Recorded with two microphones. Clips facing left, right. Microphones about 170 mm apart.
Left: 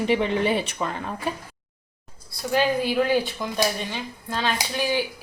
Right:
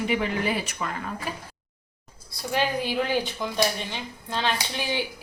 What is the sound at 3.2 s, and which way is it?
Speech, 20° right (ahead or behind).